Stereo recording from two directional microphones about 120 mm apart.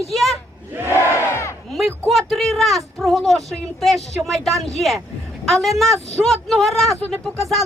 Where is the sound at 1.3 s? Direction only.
25° left (ahead or behind).